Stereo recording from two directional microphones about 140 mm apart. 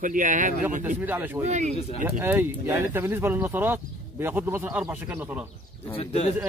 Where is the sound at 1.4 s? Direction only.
60° right (ahead or behind).